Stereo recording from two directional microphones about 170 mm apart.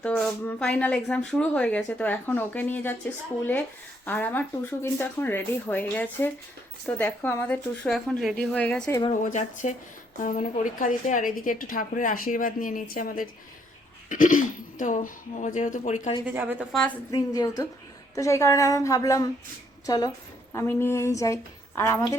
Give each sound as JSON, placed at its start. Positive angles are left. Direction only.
{"t": 0.0, "sound": "speech", "side_deg": 10}
{"t": 4.0, "sound": "speech", "side_deg": 10}
{"t": 9.2, "sound": "a woman's voice", "side_deg": 45}
{"t": 16.2, "sound": "a woman's voice", "side_deg": -10}
{"t": 17.1, "sound": "a woman's voice", "side_deg": 20}